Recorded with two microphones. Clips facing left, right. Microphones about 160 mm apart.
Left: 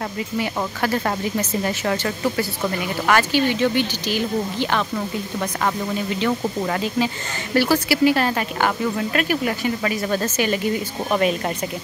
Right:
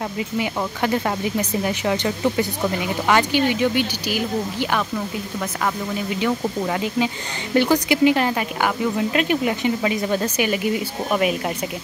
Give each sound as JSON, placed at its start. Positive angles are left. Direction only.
{"t": 0.7, "sound": "speech", "side_deg": -15}
{"t": 6.0, "sound": "speech", "side_deg": -10}
{"t": 7.5, "sound": "speech", "side_deg": -20}